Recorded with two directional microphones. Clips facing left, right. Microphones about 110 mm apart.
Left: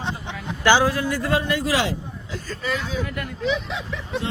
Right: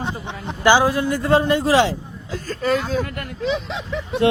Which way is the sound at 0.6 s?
15° right (ahead or behind).